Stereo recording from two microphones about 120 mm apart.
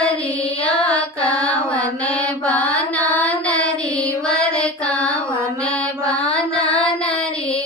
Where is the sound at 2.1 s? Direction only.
10° left (ahead or behind).